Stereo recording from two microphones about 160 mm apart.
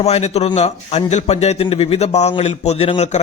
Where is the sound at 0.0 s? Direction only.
40° left (ahead or behind).